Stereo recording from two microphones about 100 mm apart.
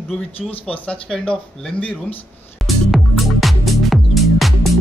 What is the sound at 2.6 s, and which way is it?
Music, centre (ahead or behind).